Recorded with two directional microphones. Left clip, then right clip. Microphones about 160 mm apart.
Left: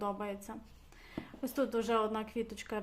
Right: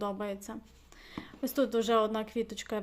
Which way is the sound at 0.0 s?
30° right (ahead or behind).